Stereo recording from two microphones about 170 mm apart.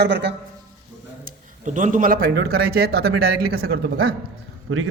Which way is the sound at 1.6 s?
50° right (ahead or behind).